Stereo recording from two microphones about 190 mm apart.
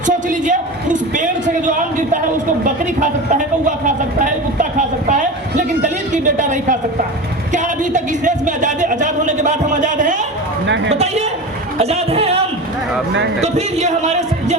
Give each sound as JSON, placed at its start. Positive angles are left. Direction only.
{"t": 0.0, "sound": "a man's voice", "side_deg": -40}
{"t": 11.8, "sound": "music", "side_deg": -35}
{"t": 13.4, "sound": "speech", "side_deg": -35}